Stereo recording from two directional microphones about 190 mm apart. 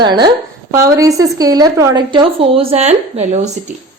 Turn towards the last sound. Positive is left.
turn(degrees=-35)  # may be behind; listen again after turning